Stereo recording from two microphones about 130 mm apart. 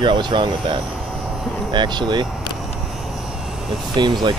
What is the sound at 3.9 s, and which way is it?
Speech, 35° right (ahead or behind).